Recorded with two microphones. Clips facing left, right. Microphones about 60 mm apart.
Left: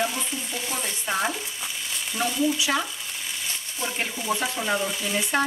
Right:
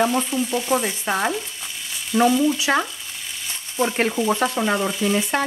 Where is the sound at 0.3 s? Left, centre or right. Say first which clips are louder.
Right 10 dB; right.